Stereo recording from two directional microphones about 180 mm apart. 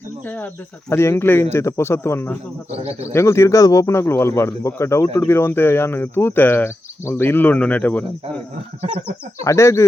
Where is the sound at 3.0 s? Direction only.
15° left (ahead or behind).